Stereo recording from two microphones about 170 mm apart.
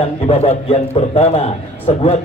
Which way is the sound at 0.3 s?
35° left (ahead or behind).